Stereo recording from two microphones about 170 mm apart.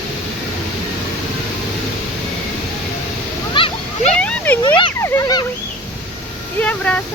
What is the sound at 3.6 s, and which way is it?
Splash, 30° left (ahead or behind).